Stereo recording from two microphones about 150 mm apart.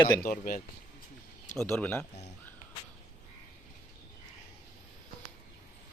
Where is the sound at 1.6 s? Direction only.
15° left (ahead or behind).